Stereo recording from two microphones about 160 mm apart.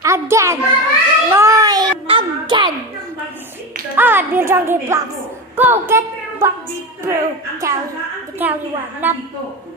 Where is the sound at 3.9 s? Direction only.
10° right (ahead or behind).